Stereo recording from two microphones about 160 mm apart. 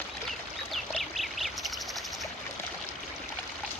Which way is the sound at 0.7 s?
Centre (ahead or behind).